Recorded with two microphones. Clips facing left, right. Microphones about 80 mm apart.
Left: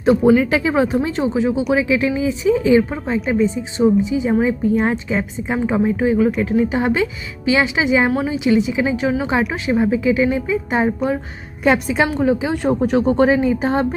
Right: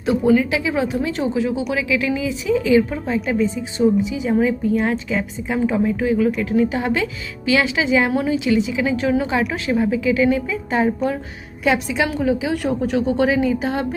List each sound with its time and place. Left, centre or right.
0.0 s speech: left
11.6 s a woman's voice: left
12.1 s speech: left